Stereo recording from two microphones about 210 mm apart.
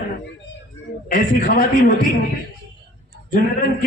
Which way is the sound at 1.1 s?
40° left (ahead or behind).